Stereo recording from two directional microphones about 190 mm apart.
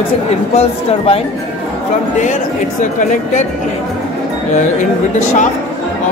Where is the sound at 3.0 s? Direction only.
45° left (ahead or behind).